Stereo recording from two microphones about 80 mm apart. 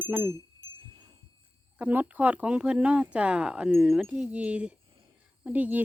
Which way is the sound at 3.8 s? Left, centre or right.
Centre.